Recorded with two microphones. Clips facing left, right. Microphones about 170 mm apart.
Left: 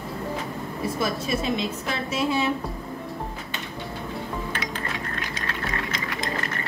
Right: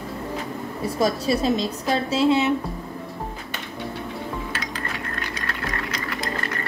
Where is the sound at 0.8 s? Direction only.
35° right (ahead or behind).